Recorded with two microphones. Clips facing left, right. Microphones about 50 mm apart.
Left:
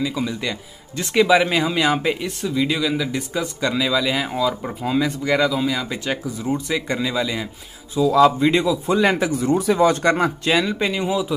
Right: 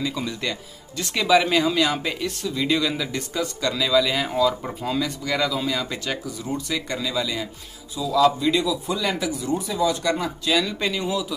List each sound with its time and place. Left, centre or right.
0.0 s speech: centre
1.1 s speech: centre
2.6 s speech: centre
4.9 s speech: left
5.5 s speech: centre
6.0 s speech: left
7.9 s speech: left
9.5 s speech: left
10.6 s speech: left